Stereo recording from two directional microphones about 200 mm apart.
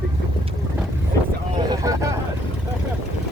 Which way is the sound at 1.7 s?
15° right (ahead or behind).